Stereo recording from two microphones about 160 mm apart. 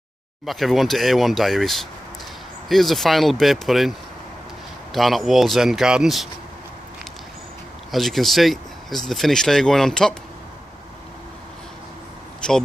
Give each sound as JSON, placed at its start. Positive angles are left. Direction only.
{"t": 0.5, "sound": "speech", "side_deg": 0}
{"t": 4.9, "sound": "speech", "side_deg": 0}
{"t": 7.9, "sound": "speech", "side_deg": 0}
{"t": 12.4, "sound": "speech", "side_deg": 5}